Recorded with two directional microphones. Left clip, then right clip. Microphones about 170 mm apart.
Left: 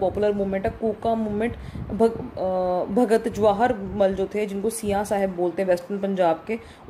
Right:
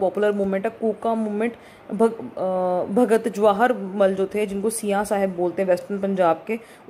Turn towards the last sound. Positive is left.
turn(degrees=-10)  # may be behind; listen again after turning